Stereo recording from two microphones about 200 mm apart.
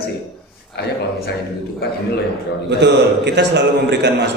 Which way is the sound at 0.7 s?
55° left (ahead or behind).